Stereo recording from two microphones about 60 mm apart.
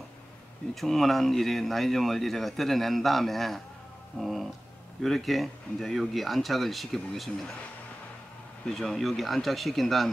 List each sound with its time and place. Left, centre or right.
0.7 s speech: centre
4.2 s a sound: centre
5.0 s speech: centre
8.7 s speech: centre